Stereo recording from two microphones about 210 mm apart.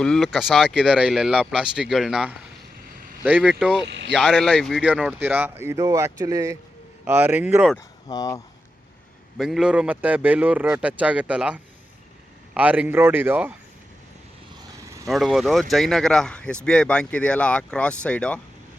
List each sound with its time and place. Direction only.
0.0 s a man's voice: centre (ahead or behind)
3.8 s speech: 55° right (ahead or behind)
4.1 s a man's voice: 5° right (ahead or behind)
8.0 s speech: 15° left (ahead or behind)
9.4 s a man's voice: 5° right (ahead or behind)
14.8 s vehicle: 15° right (ahead or behind)
15.1 s speech: centre (ahead or behind)